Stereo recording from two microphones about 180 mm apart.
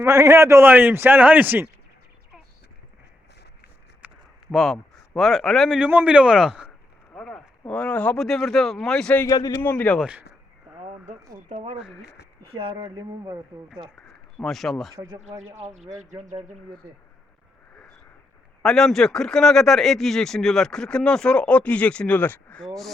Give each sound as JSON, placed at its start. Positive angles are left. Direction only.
{"t": 0.0, "sound": "a man's voice", "side_deg": -15}
{"t": 4.0, "sound": "a sound", "side_deg": -10}
{"t": 4.5, "sound": "speech", "side_deg": 0}
{"t": 9.2, "sound": "a man's voice", "side_deg": 20}
{"t": 9.6, "sound": "a man's voice", "side_deg": 10}
{"t": 11.4, "sound": "speech", "side_deg": -40}
{"t": 14.3, "sound": "speech", "side_deg": 0}
{"t": 14.9, "sound": "speech", "side_deg": -20}
{"t": 15.5, "sound": "speech", "side_deg": -40}
{"t": 18.6, "sound": "speech", "side_deg": 0}